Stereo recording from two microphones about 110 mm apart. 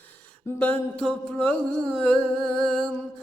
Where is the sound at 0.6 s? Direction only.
10° left (ahead or behind).